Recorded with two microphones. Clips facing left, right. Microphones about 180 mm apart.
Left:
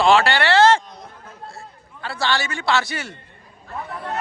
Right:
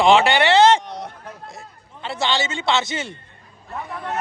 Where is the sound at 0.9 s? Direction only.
75° right (ahead or behind).